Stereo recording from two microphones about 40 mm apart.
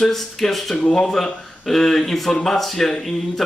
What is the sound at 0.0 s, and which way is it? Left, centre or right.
Speech, centre.